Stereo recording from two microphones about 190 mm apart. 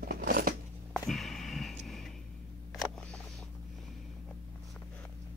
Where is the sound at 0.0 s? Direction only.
50° right (ahead or behind).